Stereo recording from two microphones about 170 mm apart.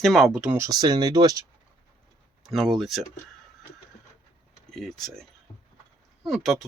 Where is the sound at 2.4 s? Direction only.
Centre (ahead or behind).